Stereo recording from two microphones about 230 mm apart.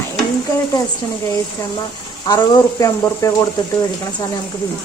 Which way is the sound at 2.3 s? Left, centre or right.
Centre.